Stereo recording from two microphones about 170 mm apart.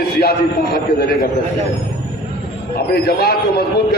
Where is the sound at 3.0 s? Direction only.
70° left (ahead or behind).